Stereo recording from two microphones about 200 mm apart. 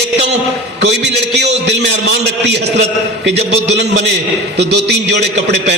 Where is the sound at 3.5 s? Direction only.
55° right (ahead or behind).